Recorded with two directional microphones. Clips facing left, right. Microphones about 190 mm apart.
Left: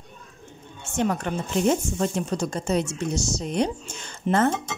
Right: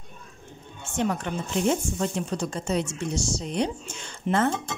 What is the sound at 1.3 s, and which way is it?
A woman's voice, 45° left (ahead or behind).